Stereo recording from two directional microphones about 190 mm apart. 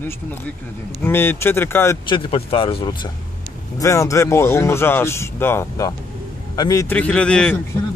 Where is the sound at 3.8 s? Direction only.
15° left (ahead or behind).